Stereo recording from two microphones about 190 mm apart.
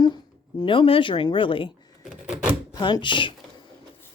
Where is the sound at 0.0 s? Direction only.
20° left (ahead or behind).